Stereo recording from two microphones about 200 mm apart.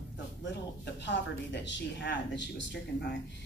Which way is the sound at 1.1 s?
60° left (ahead or behind).